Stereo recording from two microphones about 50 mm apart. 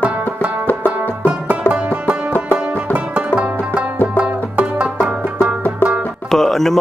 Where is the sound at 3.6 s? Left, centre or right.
Right.